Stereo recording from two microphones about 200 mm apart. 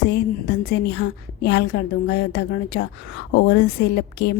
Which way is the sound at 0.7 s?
55° left (ahead or behind).